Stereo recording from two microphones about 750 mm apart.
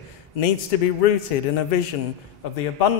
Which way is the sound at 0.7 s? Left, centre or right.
Left.